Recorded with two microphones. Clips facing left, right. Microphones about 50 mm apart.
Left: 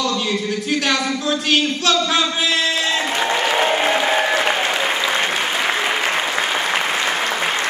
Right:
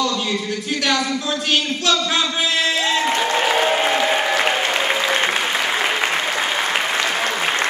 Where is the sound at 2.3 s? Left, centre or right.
Centre.